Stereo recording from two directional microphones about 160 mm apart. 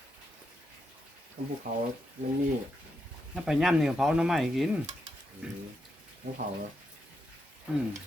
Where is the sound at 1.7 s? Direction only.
55° right (ahead or behind).